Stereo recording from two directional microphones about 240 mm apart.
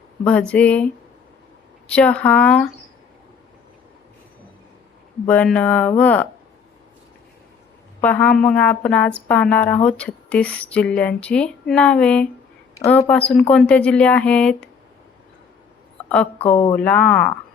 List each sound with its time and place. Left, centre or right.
0.3 s speech: centre
1.9 s speech: centre
5.3 s speech: centre
8.0 s speech: centre
16.4 s a woman's voice: left
16.7 s speech: centre